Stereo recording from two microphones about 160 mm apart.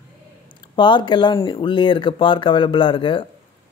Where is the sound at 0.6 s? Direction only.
30° left (ahead or behind).